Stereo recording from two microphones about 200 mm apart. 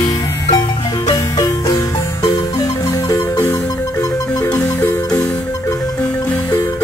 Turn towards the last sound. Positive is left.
turn(degrees=15)  # may be behind; listen again after turning